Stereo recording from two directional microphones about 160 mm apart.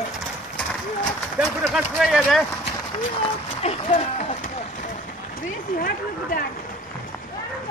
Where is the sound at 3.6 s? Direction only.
50° left (ahead or behind).